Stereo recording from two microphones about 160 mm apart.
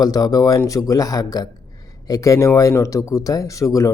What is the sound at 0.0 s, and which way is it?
Speech, 25° left (ahead or behind).